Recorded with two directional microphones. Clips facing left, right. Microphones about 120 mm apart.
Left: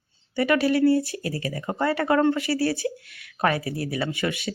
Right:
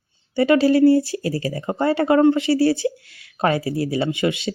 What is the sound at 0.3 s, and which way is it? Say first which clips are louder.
Speech: right 6 dB; 25° right (ahead or behind).